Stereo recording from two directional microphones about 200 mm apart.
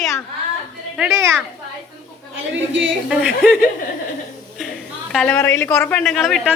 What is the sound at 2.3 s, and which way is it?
Speech, 70° right (ahead or behind).